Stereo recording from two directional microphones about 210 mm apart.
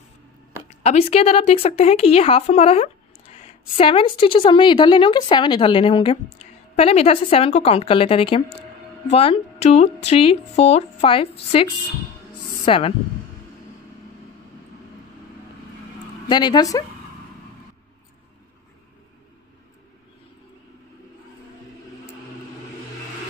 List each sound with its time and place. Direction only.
0.8 s a woman's voice: 30° left (ahead or behind)
16.3 s a woman's voice: 20° left (ahead or behind)